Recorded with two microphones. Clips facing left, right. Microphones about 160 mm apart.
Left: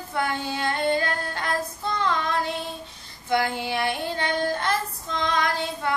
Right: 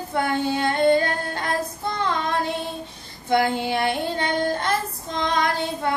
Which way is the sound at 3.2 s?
20° right (ahead or behind).